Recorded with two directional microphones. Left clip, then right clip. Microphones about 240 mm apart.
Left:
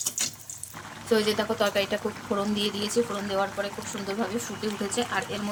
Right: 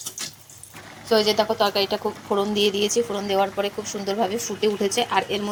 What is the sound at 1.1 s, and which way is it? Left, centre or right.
Speech, centre.